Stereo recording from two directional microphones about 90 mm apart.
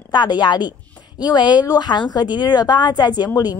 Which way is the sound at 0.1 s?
55° left (ahead or behind).